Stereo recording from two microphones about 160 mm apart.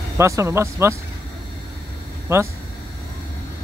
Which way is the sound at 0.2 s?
20° right (ahead or behind).